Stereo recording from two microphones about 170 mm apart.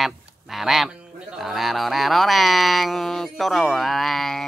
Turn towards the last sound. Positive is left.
turn(degrees=0)  # may be behind; listen again after turning